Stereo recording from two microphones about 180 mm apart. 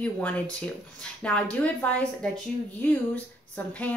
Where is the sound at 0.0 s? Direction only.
5° left (ahead or behind).